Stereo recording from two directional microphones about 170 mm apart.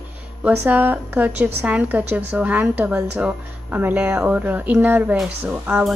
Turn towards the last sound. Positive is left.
turn(degrees=-10)  # may be behind; listen again after turning